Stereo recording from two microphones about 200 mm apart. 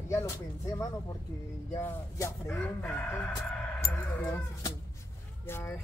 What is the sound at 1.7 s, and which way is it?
Speech, 10° left (ahead or behind).